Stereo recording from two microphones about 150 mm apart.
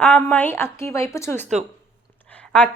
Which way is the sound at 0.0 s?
5° left (ahead or behind).